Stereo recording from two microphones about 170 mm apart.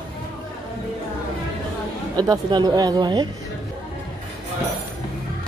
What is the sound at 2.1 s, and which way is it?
Speech, 25° right (ahead or behind).